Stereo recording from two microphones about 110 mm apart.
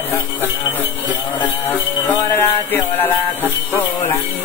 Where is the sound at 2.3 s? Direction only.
20° left (ahead or behind).